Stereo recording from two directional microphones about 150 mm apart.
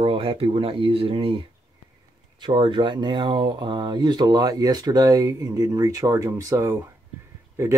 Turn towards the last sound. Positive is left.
turn(degrees=-20)  # may be behind; listen again after turning